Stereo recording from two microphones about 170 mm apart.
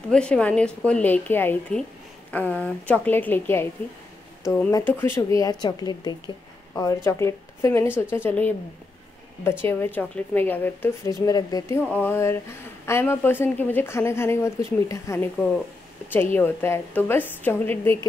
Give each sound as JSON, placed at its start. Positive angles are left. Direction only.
{"t": 0.1, "sound": "a woman's voice", "side_deg": 5}
{"t": 16.3, "sound": "a woman's voice", "side_deg": 15}